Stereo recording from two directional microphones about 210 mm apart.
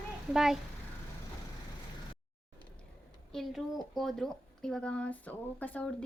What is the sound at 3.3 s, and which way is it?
A woman's voice, centre (ahead or behind).